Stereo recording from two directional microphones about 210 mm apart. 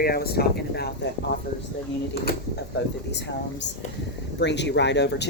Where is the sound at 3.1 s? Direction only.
55° left (ahead or behind).